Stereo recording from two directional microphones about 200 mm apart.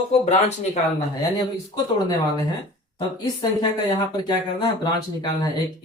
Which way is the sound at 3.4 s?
20° left (ahead or behind).